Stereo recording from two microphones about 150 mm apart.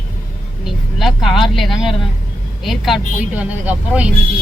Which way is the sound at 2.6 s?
Centre (ahead or behind).